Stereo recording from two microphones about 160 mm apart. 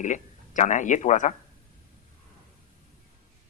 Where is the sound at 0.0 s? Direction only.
50° left (ahead or behind).